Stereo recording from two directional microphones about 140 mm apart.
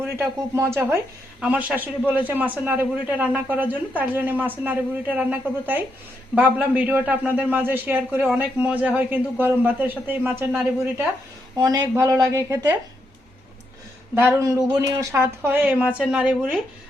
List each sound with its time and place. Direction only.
0.0 s a man's voice: 20° right (ahead or behind)
11.5 s speech: 30° right (ahead or behind)
14.2 s a man's voice: 15° right (ahead or behind)